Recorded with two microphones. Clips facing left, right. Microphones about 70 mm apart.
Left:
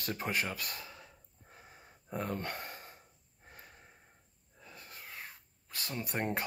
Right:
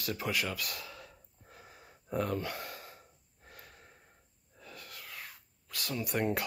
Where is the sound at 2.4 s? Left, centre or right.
Left.